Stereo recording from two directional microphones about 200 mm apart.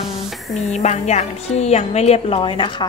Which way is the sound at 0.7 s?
35° left (ahead or behind).